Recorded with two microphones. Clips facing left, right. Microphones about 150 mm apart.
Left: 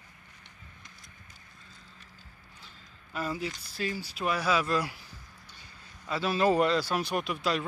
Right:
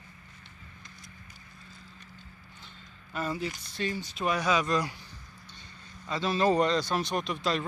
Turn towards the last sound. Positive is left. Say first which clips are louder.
# even
turn(degrees=10)  # may be behind; listen again after turning